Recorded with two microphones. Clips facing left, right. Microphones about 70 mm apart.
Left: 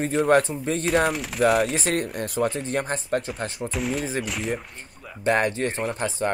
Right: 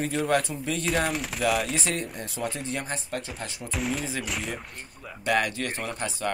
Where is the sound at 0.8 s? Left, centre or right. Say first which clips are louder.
Left 5 dB; centre.